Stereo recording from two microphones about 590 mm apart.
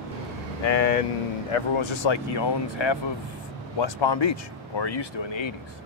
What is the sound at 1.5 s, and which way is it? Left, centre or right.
Speech, left.